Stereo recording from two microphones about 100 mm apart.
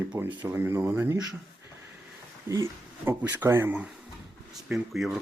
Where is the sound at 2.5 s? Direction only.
30° right (ahead or behind).